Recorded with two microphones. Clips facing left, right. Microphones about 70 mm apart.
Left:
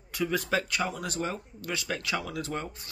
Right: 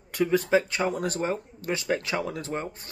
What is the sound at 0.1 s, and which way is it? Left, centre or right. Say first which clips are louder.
Speech: right 6 dB; right.